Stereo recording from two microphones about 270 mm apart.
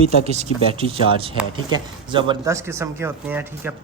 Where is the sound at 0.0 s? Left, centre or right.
Right.